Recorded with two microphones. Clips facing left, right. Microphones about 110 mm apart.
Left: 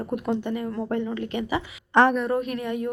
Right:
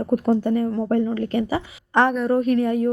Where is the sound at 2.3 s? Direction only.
35° right (ahead or behind).